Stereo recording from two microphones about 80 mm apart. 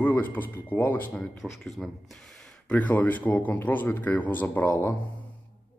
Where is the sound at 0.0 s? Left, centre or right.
Left.